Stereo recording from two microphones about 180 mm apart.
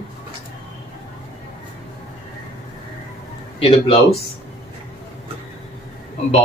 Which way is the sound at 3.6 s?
35° left (ahead or behind).